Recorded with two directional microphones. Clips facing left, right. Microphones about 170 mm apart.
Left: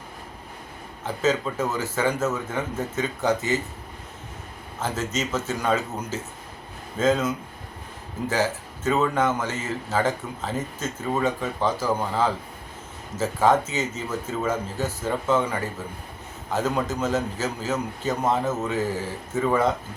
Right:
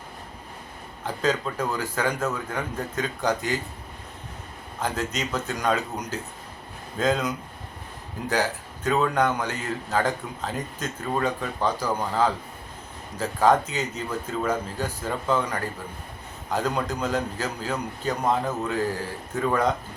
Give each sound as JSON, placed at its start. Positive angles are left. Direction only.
{"t": 1.0, "sound": "a man's voice", "side_deg": 5}
{"t": 4.8, "sound": "a man's voice", "side_deg": 5}
{"t": 16.6, "sound": "a man's voice", "side_deg": 5}